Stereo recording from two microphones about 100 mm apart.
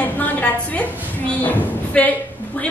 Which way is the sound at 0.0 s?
15° left (ahead or behind).